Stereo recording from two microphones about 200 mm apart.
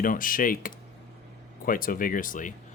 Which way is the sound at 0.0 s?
45° left (ahead or behind).